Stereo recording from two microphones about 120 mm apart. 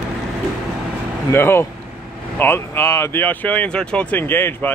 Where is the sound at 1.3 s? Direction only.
20° left (ahead or behind).